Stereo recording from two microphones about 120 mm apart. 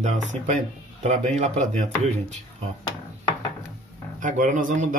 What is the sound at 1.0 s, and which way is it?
Speech, 75° right (ahead or behind).